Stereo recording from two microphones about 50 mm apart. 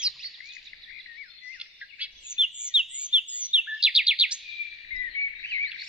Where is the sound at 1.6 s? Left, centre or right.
Centre.